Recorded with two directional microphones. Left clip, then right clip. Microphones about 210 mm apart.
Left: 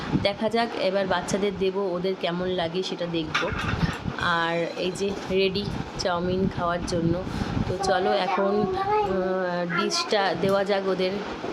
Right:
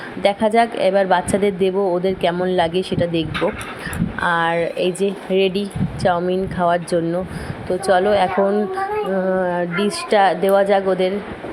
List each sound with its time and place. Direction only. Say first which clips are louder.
0.2 s speech: right 10 dB; 15° right (ahead or behind)
9.3 s speech: right 6 dB; 15° right (ahead or behind)